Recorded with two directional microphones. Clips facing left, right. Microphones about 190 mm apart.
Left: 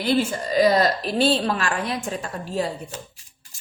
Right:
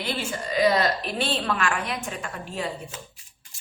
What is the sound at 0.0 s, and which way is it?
A woman's voice, 40° left (ahead or behind).